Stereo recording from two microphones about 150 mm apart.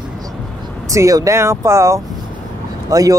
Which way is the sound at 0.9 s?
20° right (ahead or behind).